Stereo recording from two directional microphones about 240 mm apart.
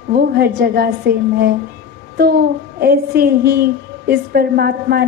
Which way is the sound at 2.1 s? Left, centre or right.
Right.